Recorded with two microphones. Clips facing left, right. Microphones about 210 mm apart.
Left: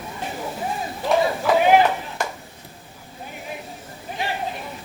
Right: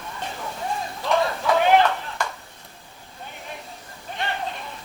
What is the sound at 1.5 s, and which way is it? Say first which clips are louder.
Chop: left 2 dB; 10° left (ahead or behind).